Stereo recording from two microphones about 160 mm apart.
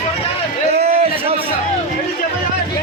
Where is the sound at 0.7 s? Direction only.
40° right (ahead or behind).